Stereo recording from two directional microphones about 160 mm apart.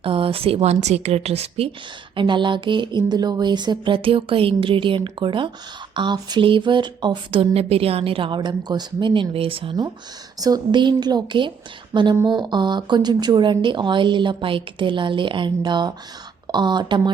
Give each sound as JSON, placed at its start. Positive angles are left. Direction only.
{"t": 0.0, "sound": "speech", "side_deg": -35}